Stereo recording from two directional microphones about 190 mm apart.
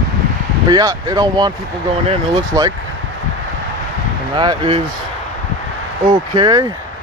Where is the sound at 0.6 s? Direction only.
20° right (ahead or behind).